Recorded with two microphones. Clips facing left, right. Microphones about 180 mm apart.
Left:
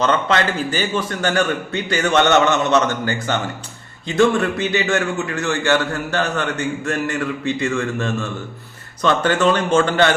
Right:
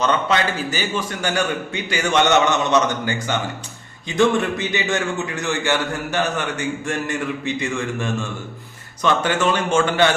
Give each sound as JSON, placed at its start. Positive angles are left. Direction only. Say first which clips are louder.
{"t": 0.1, "sound": "a man's voice", "louder": "left 2 dB", "side_deg": -15}